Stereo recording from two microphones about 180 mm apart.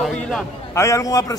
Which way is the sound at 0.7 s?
15° left (ahead or behind).